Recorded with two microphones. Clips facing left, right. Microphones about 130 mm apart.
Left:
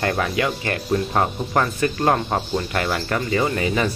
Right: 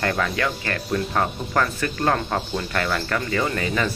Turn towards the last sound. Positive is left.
turn(degrees=20)  # may be behind; listen again after turning